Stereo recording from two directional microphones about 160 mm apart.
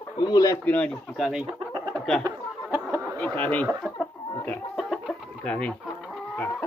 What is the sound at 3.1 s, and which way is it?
Speech, 15° left (ahead or behind).